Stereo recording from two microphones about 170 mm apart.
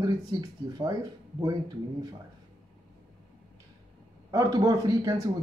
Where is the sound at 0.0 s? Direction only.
20° right (ahead or behind).